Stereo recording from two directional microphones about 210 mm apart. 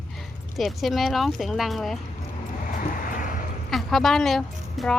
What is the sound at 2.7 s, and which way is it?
Vehicle, 40° left (ahead or behind).